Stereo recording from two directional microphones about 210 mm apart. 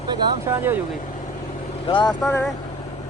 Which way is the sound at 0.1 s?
10° right (ahead or behind).